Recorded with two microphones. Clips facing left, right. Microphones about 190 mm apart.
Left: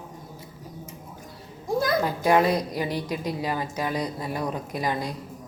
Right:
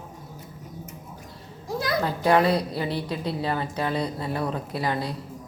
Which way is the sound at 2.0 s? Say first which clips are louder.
Right 3 dB; 10° left (ahead or behind).